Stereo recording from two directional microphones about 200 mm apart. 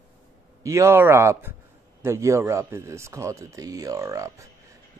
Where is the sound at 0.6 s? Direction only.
15° right (ahead or behind).